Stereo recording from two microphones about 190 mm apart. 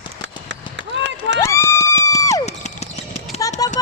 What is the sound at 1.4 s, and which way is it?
Run, 15° left (ahead or behind).